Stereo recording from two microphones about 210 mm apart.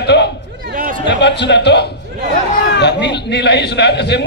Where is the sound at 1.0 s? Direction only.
55° left (ahead or behind).